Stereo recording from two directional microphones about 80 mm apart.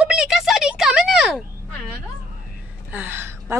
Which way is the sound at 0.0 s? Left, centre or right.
Centre.